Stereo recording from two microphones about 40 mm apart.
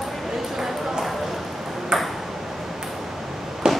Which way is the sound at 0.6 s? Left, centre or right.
Centre.